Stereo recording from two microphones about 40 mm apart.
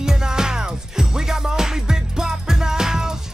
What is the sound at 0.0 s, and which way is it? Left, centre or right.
Music, centre.